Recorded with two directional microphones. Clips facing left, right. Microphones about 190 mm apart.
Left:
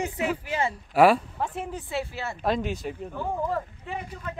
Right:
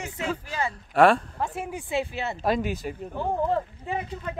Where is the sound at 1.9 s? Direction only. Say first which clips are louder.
Right 5 dB; 20° right (ahead or behind).